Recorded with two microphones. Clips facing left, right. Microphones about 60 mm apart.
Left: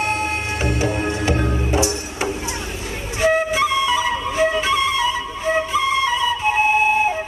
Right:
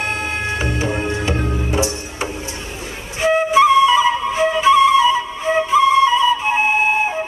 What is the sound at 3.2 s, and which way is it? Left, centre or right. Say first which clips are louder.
Flute: right 4 dB; right.